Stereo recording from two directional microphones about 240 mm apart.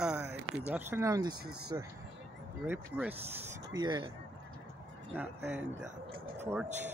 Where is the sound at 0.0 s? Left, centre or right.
Centre.